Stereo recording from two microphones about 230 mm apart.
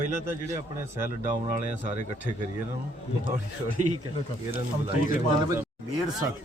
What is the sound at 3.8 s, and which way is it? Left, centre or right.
Speech, right.